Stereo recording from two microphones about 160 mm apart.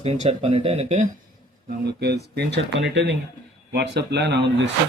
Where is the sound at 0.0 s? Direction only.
40° right (ahead or behind).